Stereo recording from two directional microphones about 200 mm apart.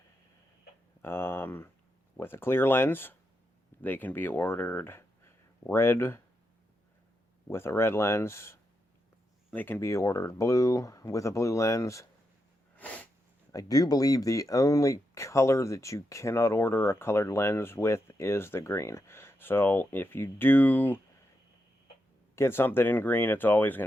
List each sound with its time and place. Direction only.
1.0 s speech: 10° left (ahead or behind)
7.4 s speech: 10° left (ahead or behind)
12.7 s sneeze: 5° left (ahead or behind)
13.5 s speech: 20° left (ahead or behind)
22.4 s speech: 10° left (ahead or behind)